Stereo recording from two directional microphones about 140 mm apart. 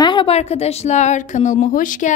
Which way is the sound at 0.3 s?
50° left (ahead or behind).